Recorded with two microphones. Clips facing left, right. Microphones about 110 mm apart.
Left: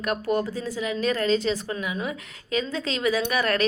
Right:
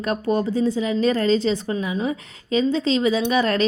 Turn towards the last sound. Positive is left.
turn(degrees=-25)  # may be behind; listen again after turning